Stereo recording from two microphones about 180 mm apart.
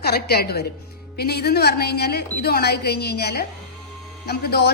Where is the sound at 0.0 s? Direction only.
60° left (ahead or behind).